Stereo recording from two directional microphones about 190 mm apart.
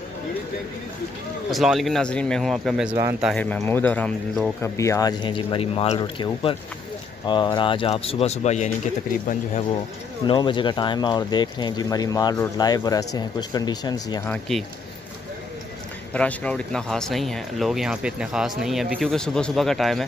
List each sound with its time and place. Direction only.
1.5 s speech: centre (ahead or behind)
2.9 s speech: 20° right (ahead or behind)
3.3 s speech: 10° left (ahead or behind); by 9.7 s 40° left (ahead or behind)
10.2 s speech: 25° left (ahead or behind)
16.1 s speech: 5° left (ahead or behind)